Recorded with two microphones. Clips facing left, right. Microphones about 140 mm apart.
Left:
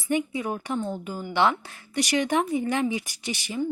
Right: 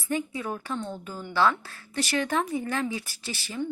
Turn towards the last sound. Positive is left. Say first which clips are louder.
# left 4 dB
turn(degrees=10)  # may be behind; listen again after turning